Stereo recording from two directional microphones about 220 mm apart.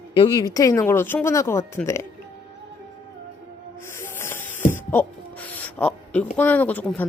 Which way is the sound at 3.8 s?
10° left (ahead or behind).